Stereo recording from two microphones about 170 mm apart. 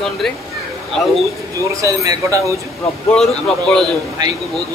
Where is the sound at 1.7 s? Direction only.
20° right (ahead or behind).